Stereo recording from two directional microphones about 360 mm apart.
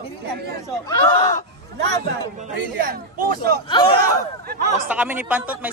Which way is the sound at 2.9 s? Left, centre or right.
Right.